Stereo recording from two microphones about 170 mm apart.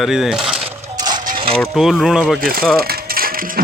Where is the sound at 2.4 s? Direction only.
60° right (ahead or behind).